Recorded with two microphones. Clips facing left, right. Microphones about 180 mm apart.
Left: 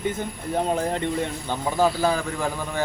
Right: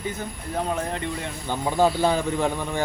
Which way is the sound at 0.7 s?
30° left (ahead or behind).